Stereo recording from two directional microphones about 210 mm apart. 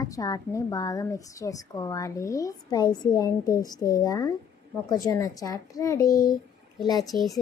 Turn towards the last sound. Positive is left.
turn(degrees=20)  # may be behind; listen again after turning